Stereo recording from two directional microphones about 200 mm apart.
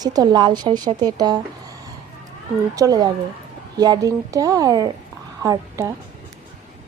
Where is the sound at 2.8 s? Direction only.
20° right (ahead or behind).